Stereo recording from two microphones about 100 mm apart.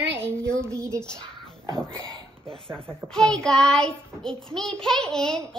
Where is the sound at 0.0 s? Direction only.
25° right (ahead or behind).